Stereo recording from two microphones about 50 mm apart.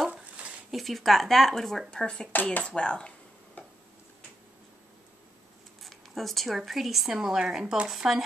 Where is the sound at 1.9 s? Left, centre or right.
Centre.